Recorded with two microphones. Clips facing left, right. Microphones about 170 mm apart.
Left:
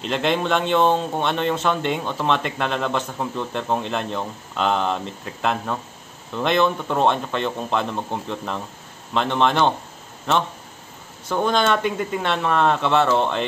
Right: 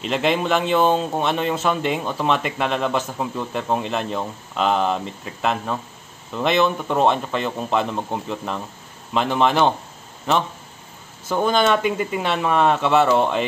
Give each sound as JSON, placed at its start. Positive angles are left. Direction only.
{"t": 0.0, "sound": "speech", "side_deg": -5}
{"t": 11.2, "sound": "speech", "side_deg": -5}